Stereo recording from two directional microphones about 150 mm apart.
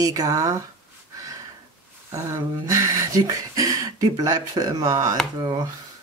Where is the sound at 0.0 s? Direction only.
25° right (ahead or behind).